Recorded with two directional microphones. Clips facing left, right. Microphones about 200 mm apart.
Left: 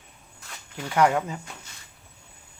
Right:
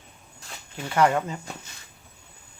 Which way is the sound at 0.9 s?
10° left (ahead or behind).